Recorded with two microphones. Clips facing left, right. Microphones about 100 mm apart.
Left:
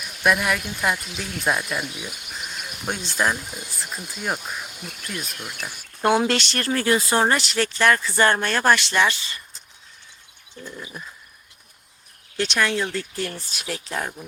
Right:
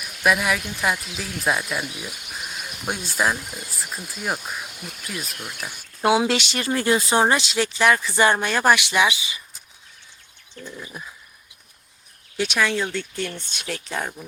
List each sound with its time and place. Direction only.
0.2 s speech: centre (ahead or behind)
10.6 s bird: 15° left (ahead or behind)
12.4 s speech: 5° right (ahead or behind)